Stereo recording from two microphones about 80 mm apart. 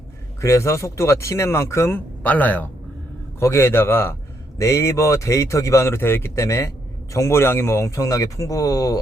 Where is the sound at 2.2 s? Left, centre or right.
Centre.